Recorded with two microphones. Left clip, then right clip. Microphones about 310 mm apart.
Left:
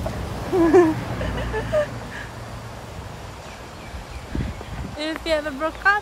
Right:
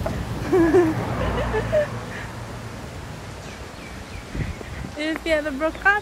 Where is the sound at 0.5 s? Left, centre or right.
Centre.